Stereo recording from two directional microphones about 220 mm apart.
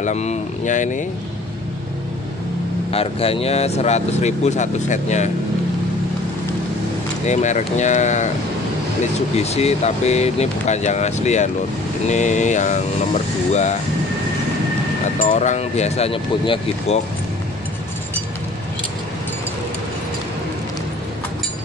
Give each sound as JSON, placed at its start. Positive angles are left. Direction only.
{"t": 0.0, "sound": "speech", "side_deg": 30}
{"t": 2.9, "sound": "speech", "side_deg": 25}
{"t": 7.2, "sound": "speech", "side_deg": 30}
{"t": 9.4, "sound": "speech", "side_deg": 30}
{"t": 15.1, "sound": "speech", "side_deg": 35}